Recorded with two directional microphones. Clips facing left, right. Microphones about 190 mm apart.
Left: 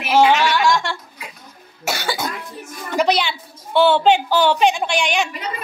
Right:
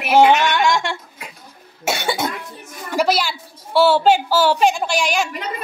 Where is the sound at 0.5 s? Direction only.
20° right (ahead or behind).